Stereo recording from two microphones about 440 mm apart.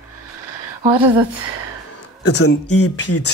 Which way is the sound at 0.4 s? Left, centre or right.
Right.